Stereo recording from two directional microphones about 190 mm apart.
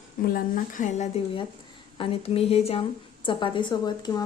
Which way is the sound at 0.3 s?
45° left (ahead or behind).